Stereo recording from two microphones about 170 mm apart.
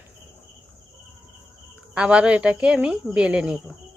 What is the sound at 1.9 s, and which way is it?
Speech, 5° right (ahead or behind).